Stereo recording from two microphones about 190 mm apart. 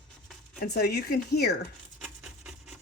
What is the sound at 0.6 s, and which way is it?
Speech, 55° left (ahead or behind).